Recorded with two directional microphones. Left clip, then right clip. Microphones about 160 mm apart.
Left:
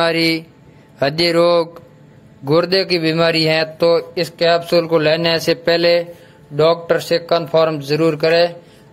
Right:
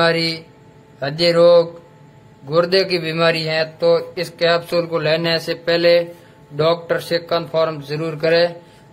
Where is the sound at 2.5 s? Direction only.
40° left (ahead or behind).